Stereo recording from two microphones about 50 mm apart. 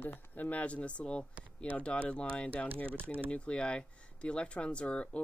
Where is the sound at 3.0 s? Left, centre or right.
Right.